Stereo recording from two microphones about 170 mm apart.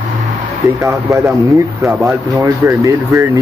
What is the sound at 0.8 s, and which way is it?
Speech, 20° right (ahead or behind).